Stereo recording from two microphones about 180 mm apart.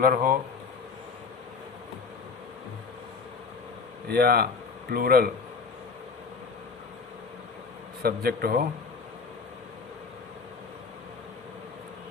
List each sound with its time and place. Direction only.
0.0 s speech: 50° right (ahead or behind)
4.1 s a man's voice: 55° right (ahead or behind)
8.0 s a man's voice: 60° right (ahead or behind)